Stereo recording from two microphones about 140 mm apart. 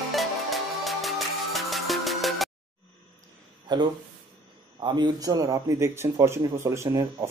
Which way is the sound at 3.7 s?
30° right (ahead or behind).